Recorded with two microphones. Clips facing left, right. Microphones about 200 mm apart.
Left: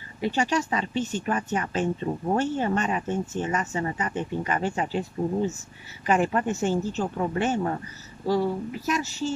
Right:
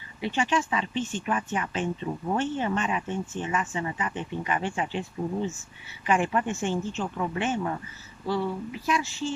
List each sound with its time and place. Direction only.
0.2 s speech: 40° left (ahead or behind)